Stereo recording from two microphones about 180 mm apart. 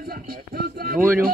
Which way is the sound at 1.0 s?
10° right (ahead or behind).